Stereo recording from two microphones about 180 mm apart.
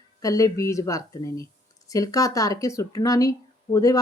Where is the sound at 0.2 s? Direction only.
20° left (ahead or behind).